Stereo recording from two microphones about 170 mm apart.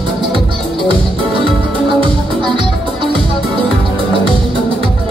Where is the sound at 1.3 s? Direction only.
30° right (ahead or behind).